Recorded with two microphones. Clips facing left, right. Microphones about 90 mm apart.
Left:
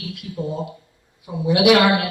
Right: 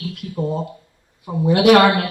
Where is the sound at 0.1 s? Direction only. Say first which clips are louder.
Right 3 dB; 40° right (ahead or behind).